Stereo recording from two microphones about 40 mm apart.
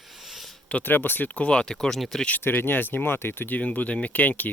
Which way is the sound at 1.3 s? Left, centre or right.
Left.